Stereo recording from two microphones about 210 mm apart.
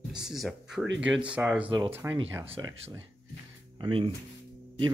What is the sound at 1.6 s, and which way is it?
Speech, 25° right (ahead or behind).